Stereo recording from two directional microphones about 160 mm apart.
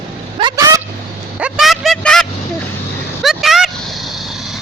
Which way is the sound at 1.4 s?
5° right (ahead or behind).